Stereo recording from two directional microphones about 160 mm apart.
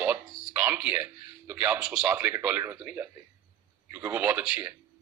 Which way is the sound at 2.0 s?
20° right (ahead or behind).